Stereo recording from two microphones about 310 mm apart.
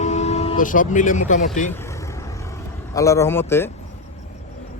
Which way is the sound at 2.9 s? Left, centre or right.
Centre.